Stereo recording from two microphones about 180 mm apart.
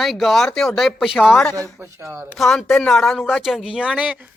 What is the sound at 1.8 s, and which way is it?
Speech, 15° right (ahead or behind).